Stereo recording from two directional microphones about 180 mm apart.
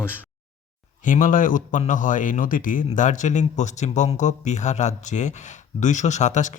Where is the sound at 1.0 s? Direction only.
45° left (ahead or behind).